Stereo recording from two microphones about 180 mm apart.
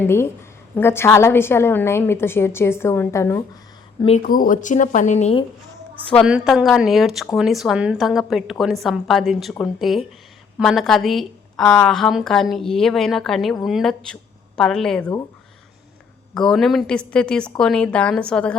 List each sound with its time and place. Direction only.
0.0 s a woman's voice: 15° left (ahead or behind)
4.2 s speech: 50° left (ahead or behind); by 5.5 s 35° left (ahead or behind)
6.2 s a woman's voice: 5° right (ahead or behind)
16.3 s a woman's voice: 5° left (ahead or behind)